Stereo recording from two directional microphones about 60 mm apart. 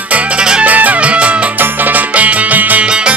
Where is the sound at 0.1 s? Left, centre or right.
Centre.